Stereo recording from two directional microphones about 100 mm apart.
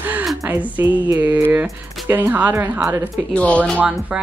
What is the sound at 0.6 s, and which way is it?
Music, 15° right (ahead or behind).